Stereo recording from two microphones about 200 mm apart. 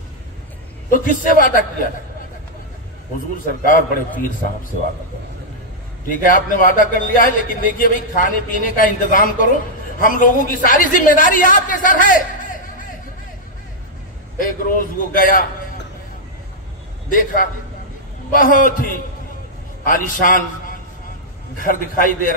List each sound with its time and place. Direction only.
0.8 s a man's voice: 45° left (ahead or behind)
3.3 s a man's voice: 40° left (ahead or behind)
6.0 s a man's voice: 40° left (ahead or behind)
14.4 s a man's voice: 45° left (ahead or behind)
17.1 s a man's voice: 40° left (ahead or behind)
21.5 s a man's voice: 45° left (ahead or behind)